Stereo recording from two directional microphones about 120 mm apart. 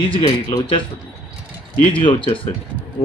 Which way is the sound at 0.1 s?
45° left (ahead or behind).